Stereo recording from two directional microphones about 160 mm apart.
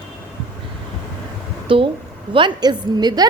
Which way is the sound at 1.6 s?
35° right (ahead or behind).